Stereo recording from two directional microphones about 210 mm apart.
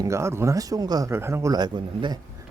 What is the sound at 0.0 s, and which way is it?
Speech, 15° right (ahead or behind).